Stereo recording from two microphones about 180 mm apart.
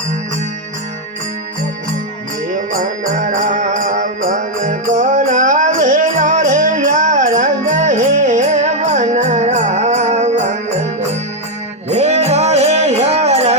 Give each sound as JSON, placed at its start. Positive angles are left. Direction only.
{"t": 2.7, "sound": "music", "side_deg": -45}